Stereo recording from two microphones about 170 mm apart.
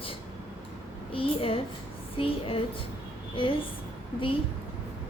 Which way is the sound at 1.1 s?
30° left (ahead or behind).